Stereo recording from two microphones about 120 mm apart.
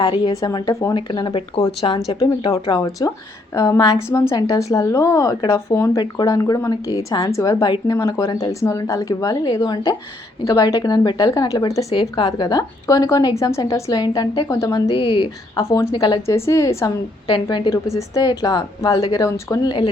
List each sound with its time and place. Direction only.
0.0 s a woman's voice: 35° left (ahead or behind)
0.9 s speech: 40° left (ahead or behind)
2.6 s a woman's voice: 30° left (ahead or behind)
11.9 s speech: 45° left (ahead or behind)
12.2 s a woman's voice: 30° left (ahead or behind)
14.8 s speech: 45° left (ahead or behind)
15.5 s a woman's voice: 25° left (ahead or behind)
16.2 s a woman's voice: 25° left (ahead or behind)
17.2 s a woman's voice: 45° left (ahead or behind)
17.9 s a woman's voice: 30° left (ahead or behind)